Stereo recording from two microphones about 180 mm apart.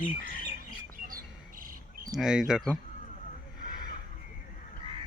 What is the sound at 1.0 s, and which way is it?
Squawk, 50° right (ahead or behind).